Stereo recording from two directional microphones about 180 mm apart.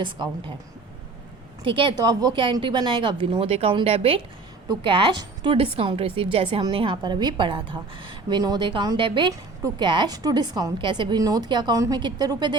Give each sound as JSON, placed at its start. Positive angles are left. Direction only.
{"t": 0.0, "sound": "a woman's voice", "side_deg": -25}
{"t": 1.6, "sound": "a woman's voice", "side_deg": -30}